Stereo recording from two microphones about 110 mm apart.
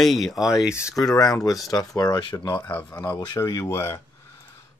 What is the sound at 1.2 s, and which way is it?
Speech, 30° left (ahead or behind).